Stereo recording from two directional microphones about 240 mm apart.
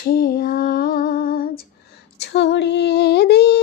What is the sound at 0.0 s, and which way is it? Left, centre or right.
Female singing, left.